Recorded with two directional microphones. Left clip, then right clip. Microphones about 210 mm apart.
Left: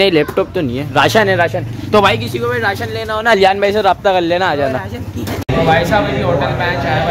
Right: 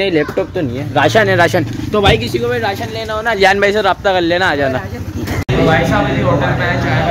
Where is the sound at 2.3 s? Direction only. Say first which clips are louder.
Even; 5° right (ahead or behind).